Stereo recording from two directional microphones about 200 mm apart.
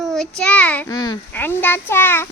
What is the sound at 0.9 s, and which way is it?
A child's voice, 20° left (ahead or behind).